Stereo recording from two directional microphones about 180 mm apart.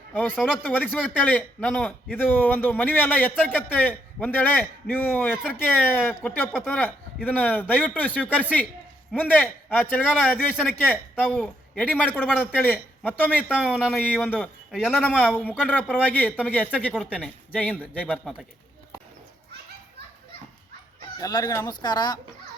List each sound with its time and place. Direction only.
0.1 s a man's voice: 10° left (ahead or behind)
14.7 s a man's voice: 5° right (ahead or behind)
21.2 s speech: 20° left (ahead or behind)